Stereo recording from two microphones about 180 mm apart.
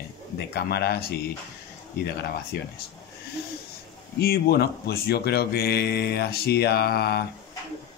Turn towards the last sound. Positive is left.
turn(degrees=65)  # may be behind; listen again after turning